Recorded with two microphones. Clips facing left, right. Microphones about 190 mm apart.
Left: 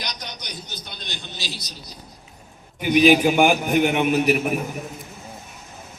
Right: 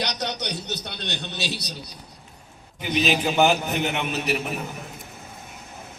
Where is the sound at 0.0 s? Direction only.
70° right (ahead or behind).